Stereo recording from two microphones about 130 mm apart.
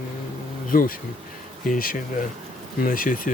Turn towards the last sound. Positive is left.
turn(degrees=90)